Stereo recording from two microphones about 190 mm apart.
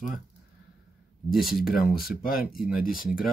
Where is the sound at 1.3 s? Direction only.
Centre (ahead or behind).